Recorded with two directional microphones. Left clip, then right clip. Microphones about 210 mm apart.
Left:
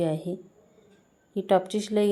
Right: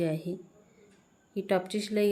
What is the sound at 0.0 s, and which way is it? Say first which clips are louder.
A woman's voice: left 4 dB; 15° left (ahead or behind).